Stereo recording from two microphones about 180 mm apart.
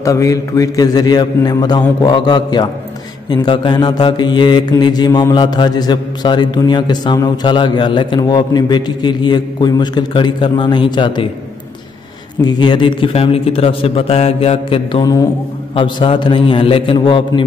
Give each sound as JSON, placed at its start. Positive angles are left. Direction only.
{"t": 0.0, "sound": "mantra", "side_deg": 15}
{"t": 12.4, "sound": "a man's voice", "side_deg": 25}
{"t": 15.7, "sound": "mantra", "side_deg": 30}